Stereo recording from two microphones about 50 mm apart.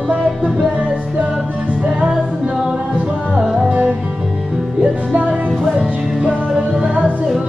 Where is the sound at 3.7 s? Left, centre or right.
Right.